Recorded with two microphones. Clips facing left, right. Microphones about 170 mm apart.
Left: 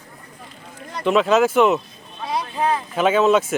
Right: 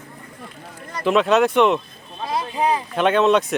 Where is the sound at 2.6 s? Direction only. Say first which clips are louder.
Right 1 dB; 15° right (ahead or behind).